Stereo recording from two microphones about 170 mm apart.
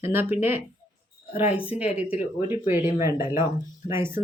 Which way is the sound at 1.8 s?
40° left (ahead or behind).